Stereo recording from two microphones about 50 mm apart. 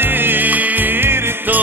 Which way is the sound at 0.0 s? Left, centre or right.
Right.